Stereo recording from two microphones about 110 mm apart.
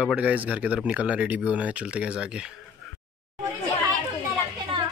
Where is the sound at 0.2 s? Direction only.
15° right (ahead or behind).